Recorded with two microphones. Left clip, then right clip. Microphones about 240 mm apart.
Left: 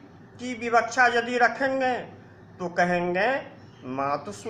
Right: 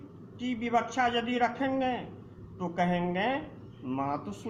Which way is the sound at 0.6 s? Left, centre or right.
Centre.